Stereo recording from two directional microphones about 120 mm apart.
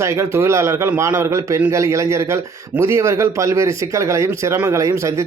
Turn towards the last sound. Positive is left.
turn(degrees=-25)  # may be behind; listen again after turning